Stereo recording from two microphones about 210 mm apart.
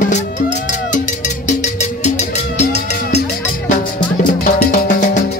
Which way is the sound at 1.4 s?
35° left (ahead or behind).